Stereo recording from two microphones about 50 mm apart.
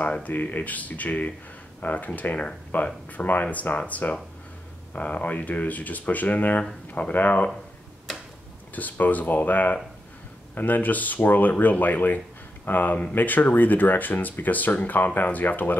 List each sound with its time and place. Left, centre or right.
0.0 s speech: left
8.7 s speech: left